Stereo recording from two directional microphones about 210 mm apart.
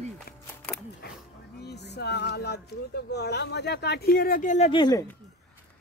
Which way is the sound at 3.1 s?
50° left (ahead or behind).